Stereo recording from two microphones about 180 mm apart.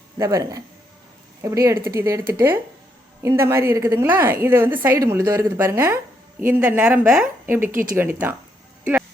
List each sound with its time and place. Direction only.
0.2 s a woman's voice: 20° right (ahead or behind)
3.2 s a woman's voice: 15° right (ahead or behind)
8.8 s music: 10° right (ahead or behind)